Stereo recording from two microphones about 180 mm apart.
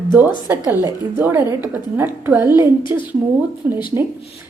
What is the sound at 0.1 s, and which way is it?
A woman's voice, 10° right (ahead or behind).